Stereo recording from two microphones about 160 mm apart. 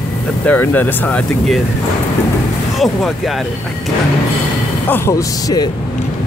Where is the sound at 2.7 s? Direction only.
Centre (ahead or behind).